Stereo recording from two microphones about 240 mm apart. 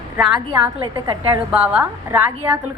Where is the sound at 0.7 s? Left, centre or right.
Centre.